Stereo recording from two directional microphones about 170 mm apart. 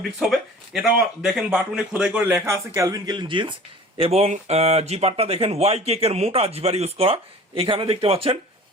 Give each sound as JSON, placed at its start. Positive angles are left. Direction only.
{"t": 0.2, "sound": "speech", "side_deg": 0}